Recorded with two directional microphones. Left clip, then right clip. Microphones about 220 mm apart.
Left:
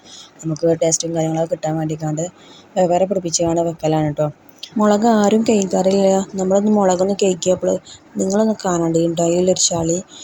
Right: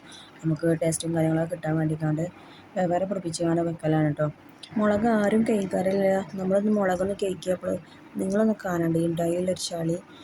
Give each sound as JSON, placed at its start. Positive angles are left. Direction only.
{"t": 0.6, "sound": "speech", "side_deg": 20}